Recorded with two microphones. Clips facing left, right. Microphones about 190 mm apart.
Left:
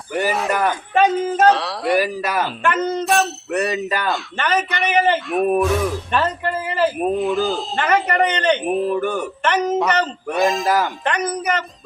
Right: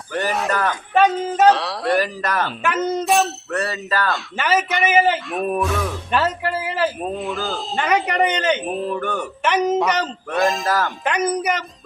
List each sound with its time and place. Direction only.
0.1 s speech: 10° left (ahead or behind)
2.6 s speech: 5° right (ahead or behind)
3.5 s speech: 15° left (ahead or behind)
4.1 s speech: 5° right (ahead or behind)
9.4 s speech: 10° right (ahead or behind)